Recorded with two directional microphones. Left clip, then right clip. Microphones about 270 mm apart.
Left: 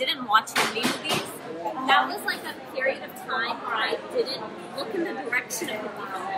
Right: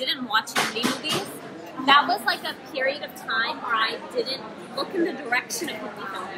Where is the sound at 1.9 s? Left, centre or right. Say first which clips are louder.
Right 4 dB; centre.